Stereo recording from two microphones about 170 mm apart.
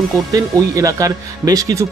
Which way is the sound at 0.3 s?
20° right (ahead or behind).